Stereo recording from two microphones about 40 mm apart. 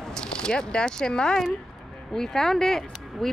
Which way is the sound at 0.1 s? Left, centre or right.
Left.